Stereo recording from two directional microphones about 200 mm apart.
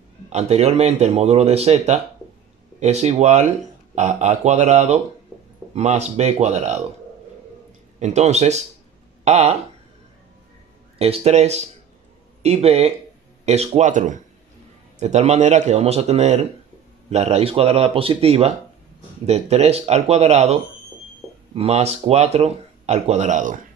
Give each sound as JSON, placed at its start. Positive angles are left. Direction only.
{"t": 0.3, "sound": "speech", "side_deg": -35}
{"t": 8.0, "sound": "speech", "side_deg": -35}
{"t": 11.0, "sound": "speech", "side_deg": -30}
{"t": 21.5, "sound": "speech", "side_deg": -30}